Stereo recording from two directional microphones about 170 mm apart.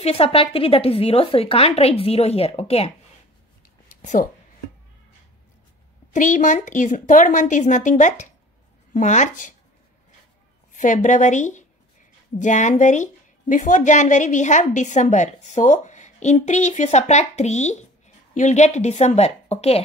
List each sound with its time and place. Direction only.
0.0 s speech: 35° left (ahead or behind)
3.9 s speech: 50° left (ahead or behind)
6.1 s speech: 45° left (ahead or behind)
10.7 s speech: 50° left (ahead or behind)